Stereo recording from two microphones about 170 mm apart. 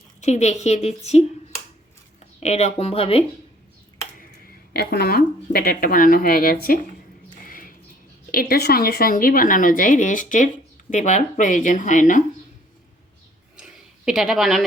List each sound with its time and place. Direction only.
0.2 s speech: 40° left (ahead or behind)
2.4 s speech: 40° left (ahead or behind)
4.4 s speech: 65° left (ahead or behind)
7.4 s a sound: 55° left (ahead or behind)
8.3 s a woman's voice: 60° left (ahead or behind)
13.6 s a sound: 5° right (ahead or behind)